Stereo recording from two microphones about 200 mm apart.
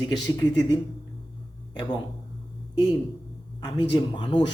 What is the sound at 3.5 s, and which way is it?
Speech, 20° left (ahead or behind).